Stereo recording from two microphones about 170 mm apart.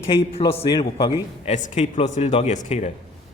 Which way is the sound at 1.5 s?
40° left (ahead or behind).